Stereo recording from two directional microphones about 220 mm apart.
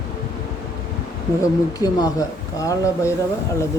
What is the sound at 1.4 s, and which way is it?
Speech, 15° left (ahead or behind).